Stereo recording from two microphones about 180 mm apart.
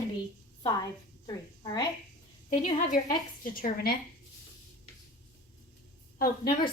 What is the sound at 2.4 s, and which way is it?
A woman's voice, 45° left (ahead or behind).